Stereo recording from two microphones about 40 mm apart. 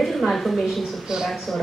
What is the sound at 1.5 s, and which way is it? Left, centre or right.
Speech, centre.